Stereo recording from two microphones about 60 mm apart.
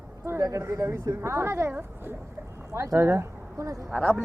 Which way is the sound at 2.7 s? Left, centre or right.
Right.